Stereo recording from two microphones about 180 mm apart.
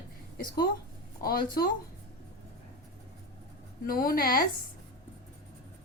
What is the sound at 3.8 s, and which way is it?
Speech, 55° left (ahead or behind).